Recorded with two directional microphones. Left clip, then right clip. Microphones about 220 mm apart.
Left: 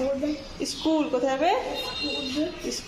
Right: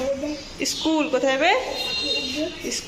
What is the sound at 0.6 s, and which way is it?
Speech, centre (ahead or behind).